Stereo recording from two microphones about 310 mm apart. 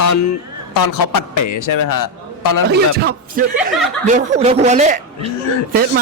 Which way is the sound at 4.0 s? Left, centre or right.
Right.